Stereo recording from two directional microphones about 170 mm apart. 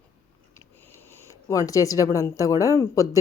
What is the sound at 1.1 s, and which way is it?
Speech, 15° left (ahead or behind).